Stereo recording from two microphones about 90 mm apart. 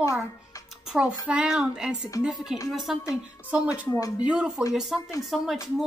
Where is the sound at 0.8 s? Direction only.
10° right (ahead or behind).